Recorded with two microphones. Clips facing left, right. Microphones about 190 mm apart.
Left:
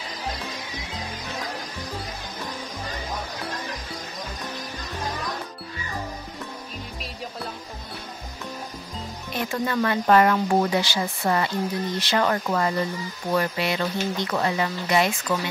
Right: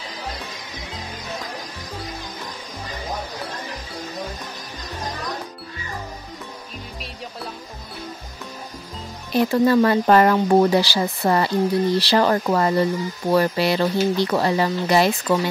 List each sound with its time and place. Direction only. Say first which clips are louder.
9.3 s speech: right 10 dB; 35° right (ahead or behind)